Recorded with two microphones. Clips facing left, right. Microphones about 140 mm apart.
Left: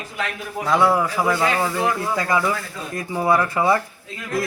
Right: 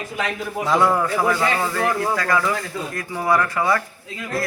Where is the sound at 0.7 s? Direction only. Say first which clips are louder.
Left 1 dB; 5° left (ahead or behind); by 3.8 s 20° left (ahead or behind).